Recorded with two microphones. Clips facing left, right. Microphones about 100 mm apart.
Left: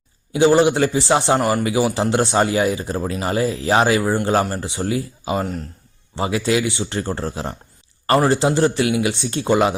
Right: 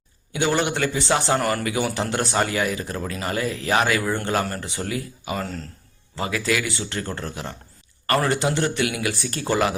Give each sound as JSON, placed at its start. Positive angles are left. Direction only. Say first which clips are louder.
{"t": 0.3, "sound": "speech", "louder": "left 8 dB", "side_deg": 30}